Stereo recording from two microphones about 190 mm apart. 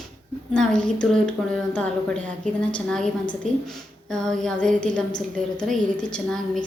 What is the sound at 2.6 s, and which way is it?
Speech, 5° left (ahead or behind).